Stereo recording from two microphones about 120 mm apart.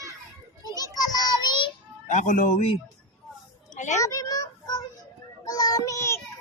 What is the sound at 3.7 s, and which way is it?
Speech, 80° left.